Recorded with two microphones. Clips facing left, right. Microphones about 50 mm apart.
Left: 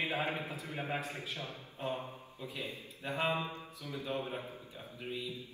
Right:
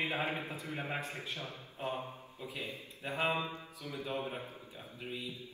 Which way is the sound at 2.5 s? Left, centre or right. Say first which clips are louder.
Even; right.